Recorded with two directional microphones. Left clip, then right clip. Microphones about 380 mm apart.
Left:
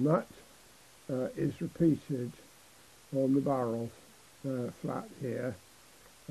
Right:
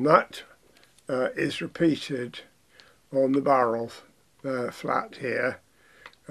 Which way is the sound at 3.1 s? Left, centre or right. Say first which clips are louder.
Right 9 dB; centre.